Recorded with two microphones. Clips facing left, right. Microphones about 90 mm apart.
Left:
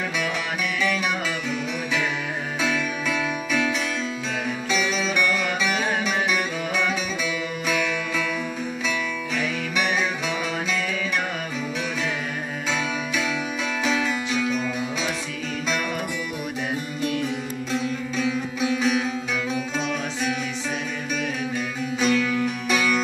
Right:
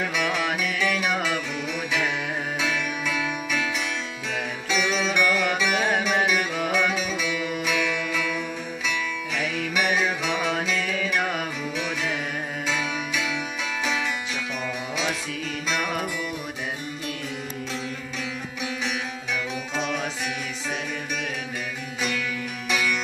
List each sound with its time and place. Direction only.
3.2 s music: 10° right (ahead or behind)
5.1 s music: 15° right (ahead or behind)
6.7 s music: 10° right (ahead or behind)
9.8 s music: 10° right (ahead or behind)
22.0 s music: 30° left (ahead or behind)